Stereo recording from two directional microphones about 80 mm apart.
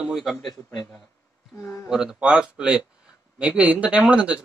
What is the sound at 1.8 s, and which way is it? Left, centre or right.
Speech, centre.